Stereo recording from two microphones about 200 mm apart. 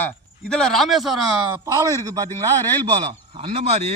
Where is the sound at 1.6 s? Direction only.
15° right (ahead or behind).